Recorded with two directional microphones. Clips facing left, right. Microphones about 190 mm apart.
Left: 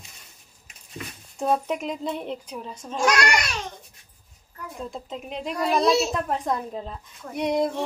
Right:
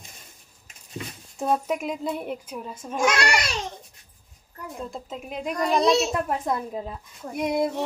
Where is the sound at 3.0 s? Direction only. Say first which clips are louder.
Left 1 dB; 25° right (ahead or behind).